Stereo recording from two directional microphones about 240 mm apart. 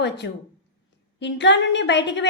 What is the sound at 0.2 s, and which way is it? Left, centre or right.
A woman's voice, left.